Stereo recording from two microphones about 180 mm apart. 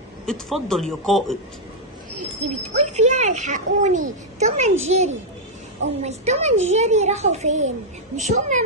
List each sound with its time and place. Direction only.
0.3 s a man's voice: centre (ahead or behind)
2.1 s speech: 40° right (ahead or behind)